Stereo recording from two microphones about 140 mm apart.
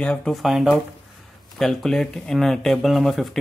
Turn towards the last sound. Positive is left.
turn(degrees=0)  # may be behind; listen again after turning